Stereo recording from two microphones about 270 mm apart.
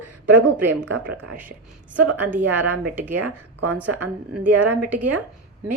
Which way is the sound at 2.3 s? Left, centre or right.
Centre.